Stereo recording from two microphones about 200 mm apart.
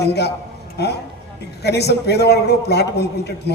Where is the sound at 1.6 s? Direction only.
55° left (ahead or behind).